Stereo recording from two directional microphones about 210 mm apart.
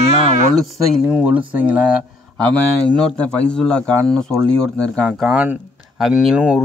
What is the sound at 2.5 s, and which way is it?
A man's voice, 5° left (ahead or behind).